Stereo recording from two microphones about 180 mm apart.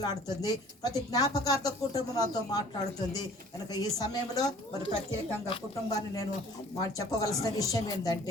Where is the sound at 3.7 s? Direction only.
20° left (ahead or behind).